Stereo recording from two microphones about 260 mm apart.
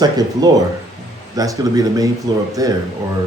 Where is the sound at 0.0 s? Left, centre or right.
Centre.